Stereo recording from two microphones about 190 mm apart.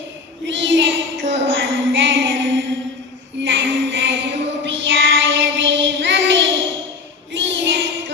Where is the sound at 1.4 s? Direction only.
85° right.